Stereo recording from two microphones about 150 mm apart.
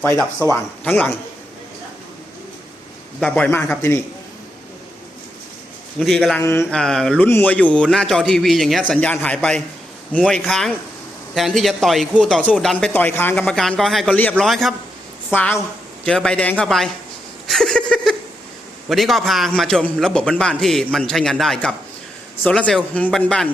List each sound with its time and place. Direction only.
0.0 s speech: 10° left (ahead or behind)
3.2 s speech: 5° left (ahead or behind)
6.0 s a man's voice: centre (ahead or behind)
6.4 s speech: 15° left (ahead or behind)
6.7 s a man's voice: 5° left (ahead or behind)
12.7 s a man's voice: 10° left (ahead or behind)
15.3 s a man's voice: 15° left (ahead or behind)
17.4 s a sound: centre (ahead or behind)
18.9 s a man's voice: centre (ahead or behind)